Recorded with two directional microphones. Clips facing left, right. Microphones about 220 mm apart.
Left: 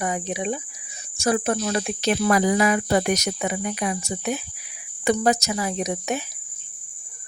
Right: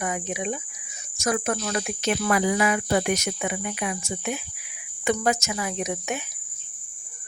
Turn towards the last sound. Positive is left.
turn(degrees=35)  # may be behind; listen again after turning